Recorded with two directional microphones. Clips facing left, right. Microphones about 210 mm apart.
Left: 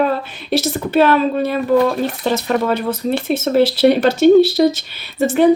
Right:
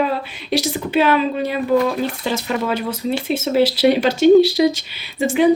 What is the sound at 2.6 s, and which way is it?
Speech, 10° right (ahead or behind).